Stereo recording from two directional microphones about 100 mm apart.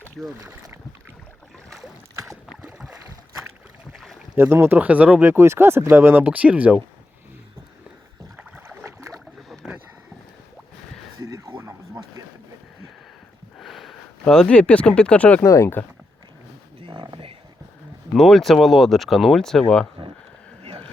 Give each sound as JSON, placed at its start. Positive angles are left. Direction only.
{"t": 0.3, "sound": "speech", "side_deg": -35}
{"t": 2.1, "sound": "boat", "side_deg": -35}
{"t": 3.9, "sound": "boat", "side_deg": 0}
{"t": 4.4, "sound": "speech", "side_deg": -25}
{"t": 8.4, "sound": "boat", "side_deg": -20}
{"t": 11.2, "sound": "a sound", "side_deg": -35}
{"t": 13.6, "sound": "speech", "side_deg": 0}
{"t": 15.4, "sound": "speech", "side_deg": 30}
{"t": 16.8, "sound": "a sound", "side_deg": -50}
{"t": 18.1, "sound": "speech", "side_deg": 5}
{"t": 20.0, "sound": "a sound", "side_deg": -55}